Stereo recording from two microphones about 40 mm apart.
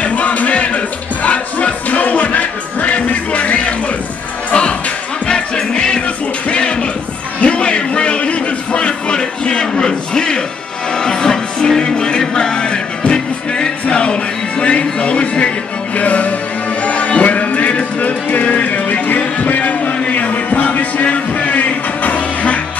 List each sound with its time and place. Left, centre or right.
0.0 s music: left
5.2 s music: centre; by 20.8 s left
21.0 s music: left